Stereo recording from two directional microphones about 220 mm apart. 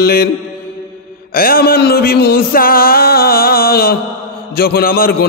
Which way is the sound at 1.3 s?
40° left (ahead or behind).